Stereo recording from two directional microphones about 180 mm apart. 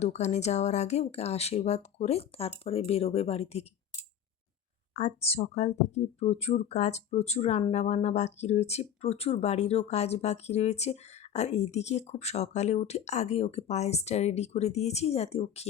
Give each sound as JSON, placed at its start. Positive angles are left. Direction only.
{"t": 0.0, "sound": "speech", "side_deg": 40}
{"t": 4.9, "sound": "speech", "side_deg": 35}